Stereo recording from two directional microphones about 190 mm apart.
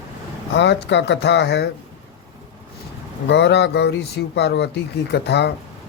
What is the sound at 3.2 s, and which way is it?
Mantra, 65° left (ahead or behind).